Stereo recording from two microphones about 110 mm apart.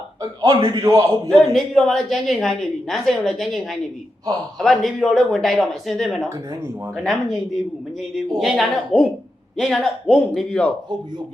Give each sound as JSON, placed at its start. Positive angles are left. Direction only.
{"t": 0.2, "sound": "a man's voice", "side_deg": -35}
{"t": 1.5, "sound": "a woman's voice", "side_deg": 5}
{"t": 6.2, "sound": "speech", "side_deg": -25}
{"t": 6.9, "sound": "a woman's voice", "side_deg": 0}